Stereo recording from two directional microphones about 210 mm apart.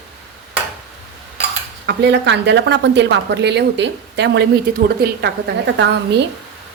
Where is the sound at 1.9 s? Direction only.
55° right (ahead or behind).